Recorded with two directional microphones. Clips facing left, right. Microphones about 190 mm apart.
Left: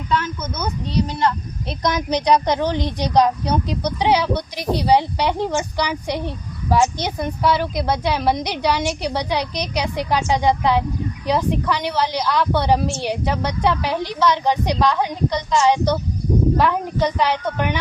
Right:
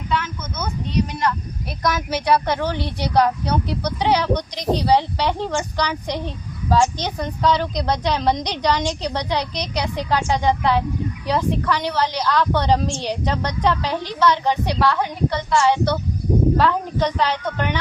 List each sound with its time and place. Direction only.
0.1 s speech: 40° left (ahead or behind)
1.2 s a woman's voice: 25° left (ahead or behind)